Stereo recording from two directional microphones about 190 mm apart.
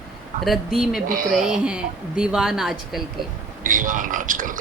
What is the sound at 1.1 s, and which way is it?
Speech, 45° right (ahead or behind).